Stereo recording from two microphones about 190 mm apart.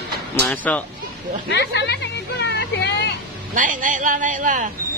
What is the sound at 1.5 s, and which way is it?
Speech, 65° left (ahead or behind).